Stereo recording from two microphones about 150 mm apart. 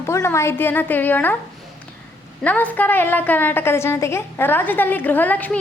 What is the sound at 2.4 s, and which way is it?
A woman's voice, 10° left (ahead or behind).